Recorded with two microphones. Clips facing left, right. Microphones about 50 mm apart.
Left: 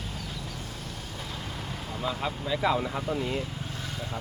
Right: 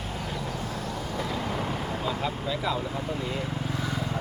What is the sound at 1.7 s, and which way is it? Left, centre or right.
Vehicle, right.